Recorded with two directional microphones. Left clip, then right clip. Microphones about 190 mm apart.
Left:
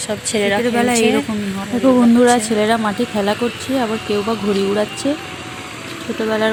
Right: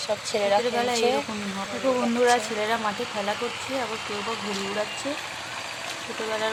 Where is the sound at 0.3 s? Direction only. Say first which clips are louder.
Left 5 dB; 5° right (ahead or behind).